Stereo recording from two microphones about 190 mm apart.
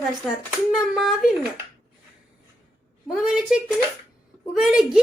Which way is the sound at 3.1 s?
Centre (ahead or behind).